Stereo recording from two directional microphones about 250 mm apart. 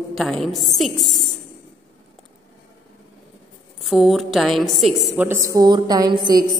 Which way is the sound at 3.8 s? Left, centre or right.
Centre.